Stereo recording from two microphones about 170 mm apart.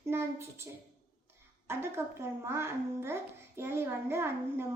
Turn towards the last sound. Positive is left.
turn(degrees=-15)  # may be behind; listen again after turning